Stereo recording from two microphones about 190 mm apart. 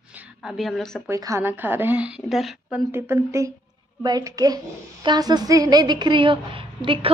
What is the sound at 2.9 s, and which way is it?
A woman's voice, 10° right (ahead or behind).